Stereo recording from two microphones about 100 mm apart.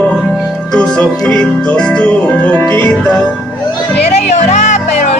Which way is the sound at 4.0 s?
90° left.